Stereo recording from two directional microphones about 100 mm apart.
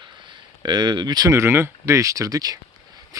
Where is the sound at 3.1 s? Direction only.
35° right (ahead or behind).